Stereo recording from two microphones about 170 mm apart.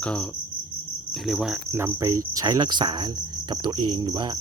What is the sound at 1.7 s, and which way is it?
Cricket, 15° right (ahead or behind).